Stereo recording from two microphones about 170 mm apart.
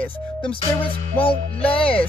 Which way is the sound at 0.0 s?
10° left (ahead or behind).